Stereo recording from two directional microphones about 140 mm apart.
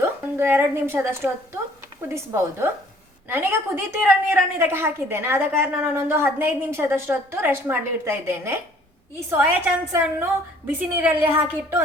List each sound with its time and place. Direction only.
0.0 s a woman's voice: 15° right (ahead or behind)